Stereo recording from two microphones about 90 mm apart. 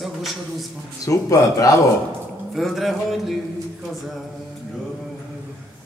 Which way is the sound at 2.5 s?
Centre (ahead or behind).